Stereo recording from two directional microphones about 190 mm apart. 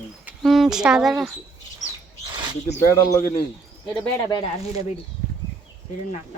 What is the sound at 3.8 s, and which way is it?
Speech, 20° left (ahead or behind).